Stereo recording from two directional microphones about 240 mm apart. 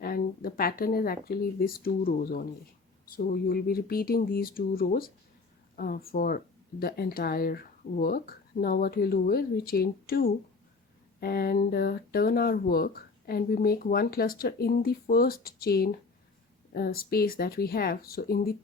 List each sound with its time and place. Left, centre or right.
0.0 s speech: left